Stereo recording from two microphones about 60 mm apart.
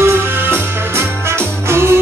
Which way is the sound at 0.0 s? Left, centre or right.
Right.